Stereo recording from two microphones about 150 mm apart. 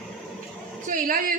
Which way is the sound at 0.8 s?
65° right (ahead or behind).